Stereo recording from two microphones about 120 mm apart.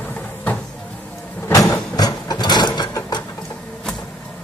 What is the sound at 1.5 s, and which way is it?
Mechanisms, 30° left (ahead or behind).